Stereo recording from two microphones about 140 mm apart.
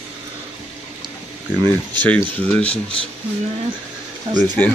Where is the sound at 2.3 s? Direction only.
10° left (ahead or behind).